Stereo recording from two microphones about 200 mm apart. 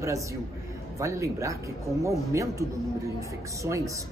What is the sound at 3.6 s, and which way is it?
Speech, 15° right (ahead or behind).